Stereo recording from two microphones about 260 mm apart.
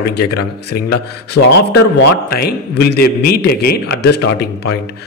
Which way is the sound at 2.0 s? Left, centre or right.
Left.